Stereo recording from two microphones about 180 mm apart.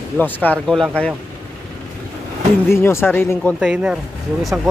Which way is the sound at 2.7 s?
15° left (ahead or behind).